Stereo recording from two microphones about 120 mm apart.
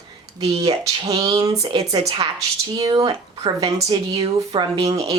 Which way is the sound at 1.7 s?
40° right (ahead or behind).